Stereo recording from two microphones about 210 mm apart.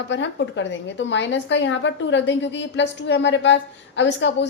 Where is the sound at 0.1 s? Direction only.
60° left (ahead or behind).